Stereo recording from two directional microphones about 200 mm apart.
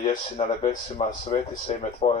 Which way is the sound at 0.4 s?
30° left (ahead or behind).